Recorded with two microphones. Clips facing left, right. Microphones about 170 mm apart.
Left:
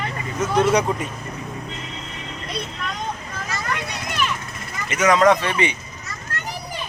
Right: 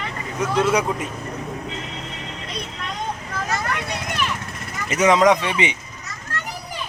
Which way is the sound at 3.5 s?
55° right (ahead or behind).